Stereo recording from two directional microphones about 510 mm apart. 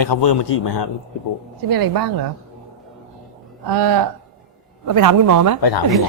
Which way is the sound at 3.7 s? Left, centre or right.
Right.